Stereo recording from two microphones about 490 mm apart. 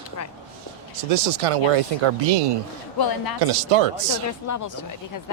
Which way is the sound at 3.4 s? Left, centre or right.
Right.